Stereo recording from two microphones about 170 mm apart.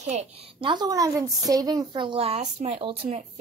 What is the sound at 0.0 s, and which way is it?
A woman's voice, 40° right (ahead or behind).